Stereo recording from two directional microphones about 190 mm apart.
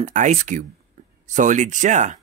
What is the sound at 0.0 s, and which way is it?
Speech, 40° right (ahead or behind).